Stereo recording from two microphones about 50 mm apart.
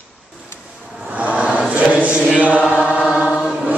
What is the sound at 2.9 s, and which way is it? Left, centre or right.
Chant, left.